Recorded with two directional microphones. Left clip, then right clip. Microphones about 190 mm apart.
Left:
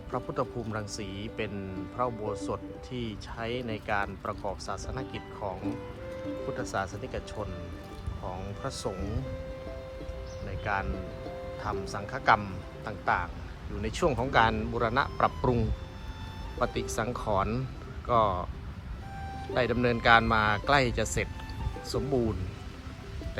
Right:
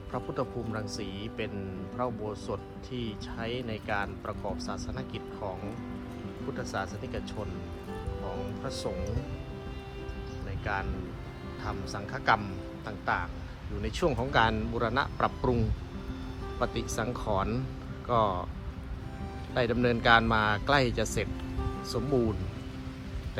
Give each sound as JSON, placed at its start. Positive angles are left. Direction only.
{"t": 0.1, "sound": "speech", "side_deg": -5}
{"t": 6.6, "sound": "speech", "side_deg": -10}
{"t": 8.6, "sound": "speech", "side_deg": -10}
{"t": 10.7, "sound": "speech", "side_deg": -10}
{"t": 19.5, "sound": "speech", "side_deg": -15}